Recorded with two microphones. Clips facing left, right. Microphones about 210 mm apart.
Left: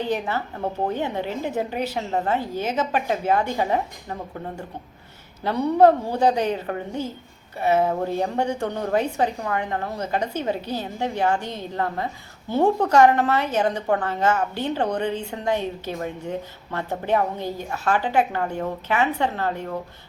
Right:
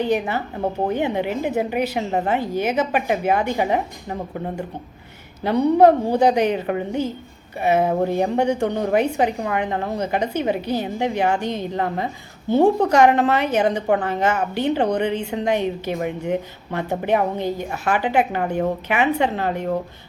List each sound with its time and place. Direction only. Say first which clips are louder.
0.0 s a woman's voice: right 4 dB; 15° right (ahead or behind)